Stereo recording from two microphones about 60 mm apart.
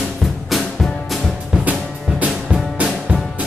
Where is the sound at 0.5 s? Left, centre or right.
Centre.